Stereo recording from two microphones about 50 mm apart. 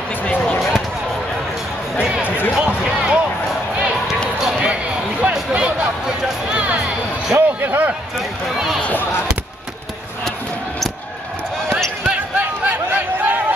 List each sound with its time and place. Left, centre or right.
2.0 s music: centre
2.2 s basketball bounce: left
2.5 s basketball bounce: right
4.5 s basketball bounce: centre
5.5 s music: right
7.3 s a sound: right
12.1 s a sound: right